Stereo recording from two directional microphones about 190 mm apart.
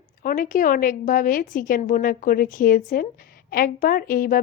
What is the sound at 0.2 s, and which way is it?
A woman's voice, 45° left (ahead or behind).